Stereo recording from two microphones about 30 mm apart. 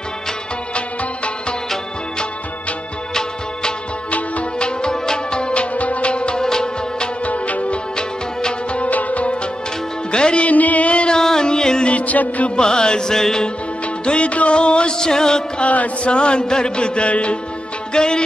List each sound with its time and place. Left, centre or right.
4.6 s music: left
5.8 s music: left
6.4 s music: left
7.2 s music: left
10.1 s music: left
10.4 s music: left
11.1 s music: left
11.9 s music: left
12.5 s music: left
14.0 s music: left
15.6 s music: left
16.0 s music: left
17.9 s music: left